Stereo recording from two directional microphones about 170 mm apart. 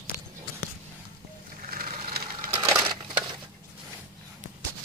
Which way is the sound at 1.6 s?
55° right (ahead or behind).